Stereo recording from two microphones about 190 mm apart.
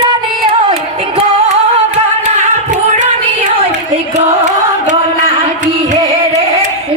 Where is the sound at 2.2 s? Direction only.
40° right (ahead or behind).